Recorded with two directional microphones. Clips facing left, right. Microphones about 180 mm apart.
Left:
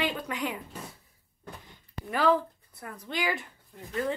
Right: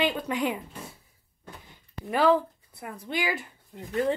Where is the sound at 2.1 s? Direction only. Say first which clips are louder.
Right 3 dB; 20° right (ahead or behind).